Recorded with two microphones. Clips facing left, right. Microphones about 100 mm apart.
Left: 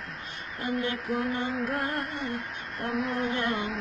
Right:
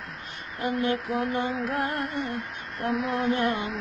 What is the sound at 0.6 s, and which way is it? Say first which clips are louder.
Female singing: right 4 dB; 35° right (ahead or behind).